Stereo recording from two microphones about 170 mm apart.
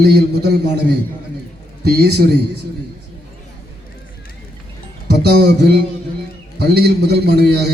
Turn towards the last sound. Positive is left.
turn(degrees=-70)  # may be behind; listen again after turning